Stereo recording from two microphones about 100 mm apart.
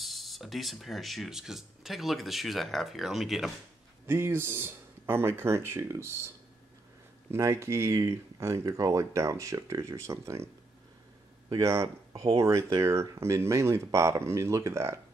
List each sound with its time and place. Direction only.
0.0 s speech: centre (ahead or behind)
4.1 s speech: 25° right (ahead or behind)
12.1 s speech: 60° right (ahead or behind)
12.4 s speech: 30° right (ahead or behind)